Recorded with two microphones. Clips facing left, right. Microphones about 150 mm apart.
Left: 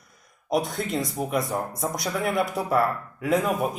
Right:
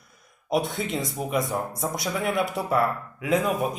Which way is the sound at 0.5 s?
Centre (ahead or behind).